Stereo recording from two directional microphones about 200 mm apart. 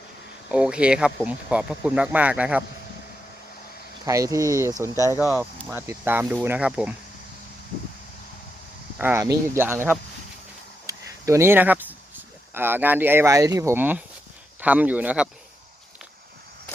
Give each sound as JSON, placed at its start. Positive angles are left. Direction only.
{"t": 0.5, "sound": "speech", "side_deg": -5}
{"t": 4.0, "sound": "speech", "side_deg": -15}
{"t": 9.0, "sound": "speech", "side_deg": -10}